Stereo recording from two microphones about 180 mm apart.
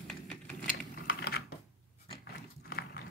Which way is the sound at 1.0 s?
60° left (ahead or behind).